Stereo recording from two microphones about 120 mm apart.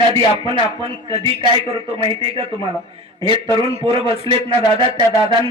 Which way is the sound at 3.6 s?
50° right (ahead or behind).